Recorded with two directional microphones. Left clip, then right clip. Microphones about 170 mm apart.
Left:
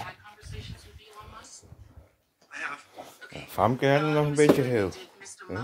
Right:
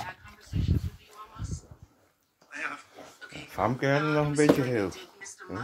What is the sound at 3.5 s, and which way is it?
Speech, 35° left (ahead or behind).